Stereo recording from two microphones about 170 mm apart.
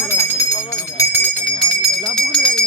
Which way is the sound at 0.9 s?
10° left (ahead or behind).